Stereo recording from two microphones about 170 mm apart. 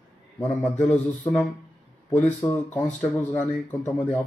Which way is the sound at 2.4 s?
15° left (ahead or behind).